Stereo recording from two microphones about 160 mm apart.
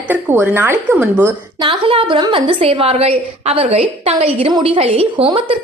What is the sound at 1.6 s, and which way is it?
A woman's voice, 35° right (ahead or behind).